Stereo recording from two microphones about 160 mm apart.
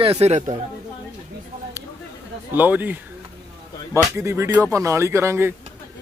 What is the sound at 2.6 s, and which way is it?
Speech, 10° right (ahead or behind).